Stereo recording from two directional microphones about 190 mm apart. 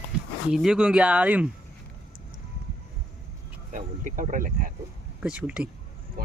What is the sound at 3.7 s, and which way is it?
Speech, 45° right (ahead or behind).